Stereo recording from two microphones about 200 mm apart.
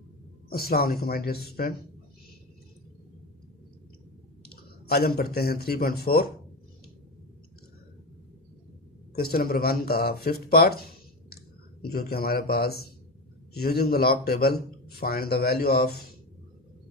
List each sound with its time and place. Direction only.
0.5 s speech: 50° left (ahead or behind)
4.8 s speech: 50° left (ahead or behind)
9.1 s speech: 50° left (ahead or behind)